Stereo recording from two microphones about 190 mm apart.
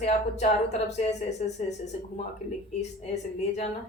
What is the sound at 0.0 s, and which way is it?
Speech, 35° left (ahead or behind).